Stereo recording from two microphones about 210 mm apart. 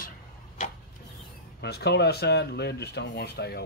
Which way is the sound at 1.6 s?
50° left (ahead or behind).